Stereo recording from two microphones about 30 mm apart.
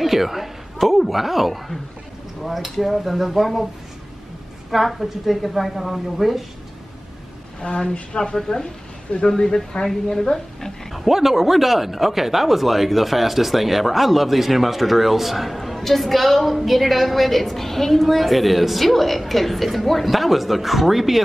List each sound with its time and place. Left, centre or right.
0.0 s a woman's voice: centre
4.6 s speech: centre
7.6 s a woman's voice: left
8.5 s speech: centre
10.9 s speech: centre